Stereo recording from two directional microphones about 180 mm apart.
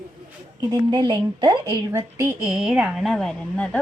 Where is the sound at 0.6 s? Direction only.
20° right (ahead or behind).